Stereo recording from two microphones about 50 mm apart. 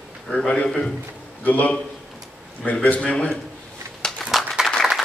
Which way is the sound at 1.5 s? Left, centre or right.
Left.